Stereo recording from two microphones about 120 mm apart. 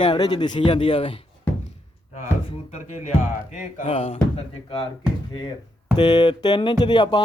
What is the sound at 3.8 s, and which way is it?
Speech, 50° left (ahead or behind).